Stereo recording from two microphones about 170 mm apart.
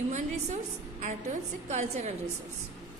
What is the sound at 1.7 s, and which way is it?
Speech, 40° right (ahead or behind).